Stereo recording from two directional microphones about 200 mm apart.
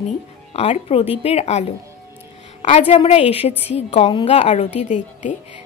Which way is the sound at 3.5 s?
10° right (ahead or behind).